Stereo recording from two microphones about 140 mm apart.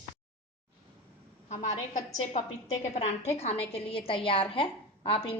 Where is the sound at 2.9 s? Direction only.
50° left (ahead or behind).